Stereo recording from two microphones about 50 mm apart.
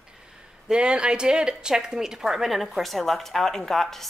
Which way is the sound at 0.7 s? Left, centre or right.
Centre.